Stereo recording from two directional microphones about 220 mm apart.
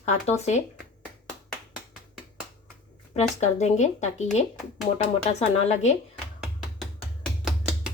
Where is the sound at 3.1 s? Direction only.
30° left (ahead or behind).